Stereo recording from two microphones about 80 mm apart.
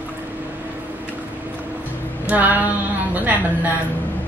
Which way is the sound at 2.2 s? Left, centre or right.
Right.